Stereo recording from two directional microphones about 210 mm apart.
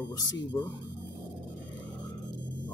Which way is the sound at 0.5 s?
10° left (ahead or behind).